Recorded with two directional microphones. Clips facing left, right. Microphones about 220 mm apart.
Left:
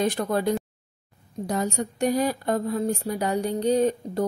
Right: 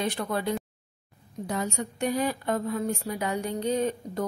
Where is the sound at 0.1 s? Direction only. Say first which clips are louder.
Left 5 dB; 45° left (ahead or behind).